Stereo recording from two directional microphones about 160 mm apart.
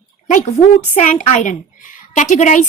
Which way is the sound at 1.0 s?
50° left (ahead or behind).